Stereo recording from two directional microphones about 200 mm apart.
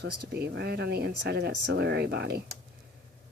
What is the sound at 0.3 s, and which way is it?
Speech, 55° right (ahead or behind).